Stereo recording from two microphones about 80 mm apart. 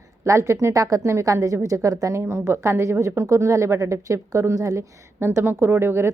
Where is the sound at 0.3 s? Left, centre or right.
Right.